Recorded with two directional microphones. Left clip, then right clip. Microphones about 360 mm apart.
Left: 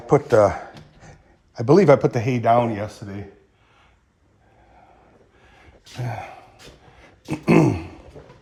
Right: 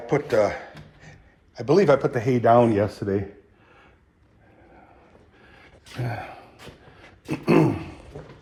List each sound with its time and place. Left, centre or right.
0.2 s speech: centre
1.5 s a man's voice: left
2.4 s speech: centre
5.4 s a sound: centre
6.9 s throat clearing: centre